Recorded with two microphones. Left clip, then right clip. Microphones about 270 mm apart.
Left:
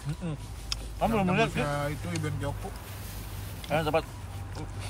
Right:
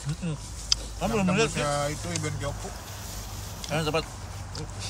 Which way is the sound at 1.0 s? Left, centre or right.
Left.